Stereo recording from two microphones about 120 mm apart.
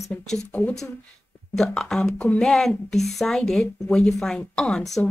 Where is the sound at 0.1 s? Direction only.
15° left (ahead or behind).